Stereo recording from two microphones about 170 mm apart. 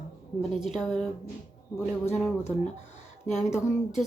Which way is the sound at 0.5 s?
Centre (ahead or behind).